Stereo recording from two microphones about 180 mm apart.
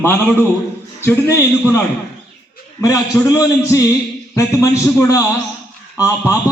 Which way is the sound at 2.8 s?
20° left (ahead or behind).